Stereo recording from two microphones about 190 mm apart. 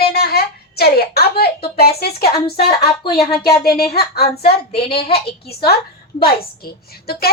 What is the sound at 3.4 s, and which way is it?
Speech, 55° left (ahead or behind).